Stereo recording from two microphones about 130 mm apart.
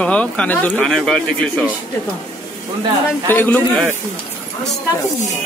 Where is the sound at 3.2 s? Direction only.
15° left (ahead or behind).